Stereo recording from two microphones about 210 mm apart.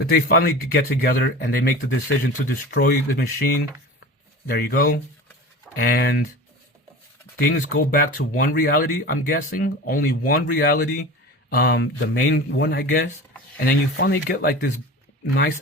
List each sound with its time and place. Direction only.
0.0 s speech: 45° left (ahead or behind)
7.3 s speech: 45° left (ahead or behind)